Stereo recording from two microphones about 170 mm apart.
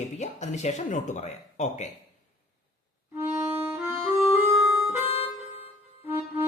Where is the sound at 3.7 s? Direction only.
15° right (ahead or behind).